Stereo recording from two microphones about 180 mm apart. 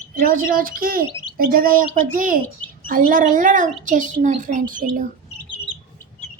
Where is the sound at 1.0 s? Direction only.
25° left (ahead or behind).